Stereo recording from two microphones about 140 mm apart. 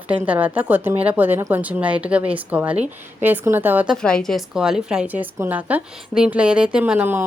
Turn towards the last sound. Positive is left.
turn(degrees=-15)  # may be behind; listen again after turning